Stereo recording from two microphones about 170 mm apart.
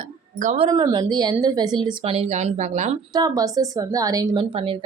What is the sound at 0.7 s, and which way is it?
A woman's voice, 25° right (ahead or behind).